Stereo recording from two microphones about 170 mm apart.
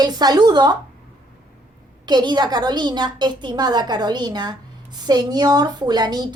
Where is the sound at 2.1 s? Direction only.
25° right (ahead or behind).